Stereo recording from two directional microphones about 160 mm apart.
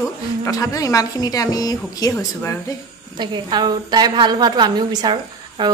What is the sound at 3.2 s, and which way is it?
A woman's voice, 25° right (ahead or behind).